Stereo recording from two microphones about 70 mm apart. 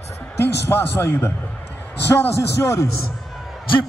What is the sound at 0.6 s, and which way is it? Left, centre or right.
A man's voice, left.